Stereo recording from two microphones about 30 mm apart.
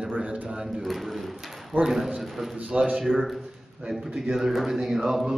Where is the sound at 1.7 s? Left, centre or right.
Right.